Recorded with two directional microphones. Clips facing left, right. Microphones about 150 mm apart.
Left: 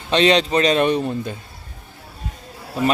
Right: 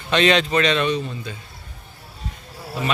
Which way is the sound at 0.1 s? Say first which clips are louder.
Left 2 dB; 30° left (ahead or behind).